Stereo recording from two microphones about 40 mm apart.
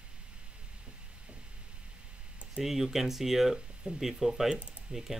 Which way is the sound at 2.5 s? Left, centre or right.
Centre.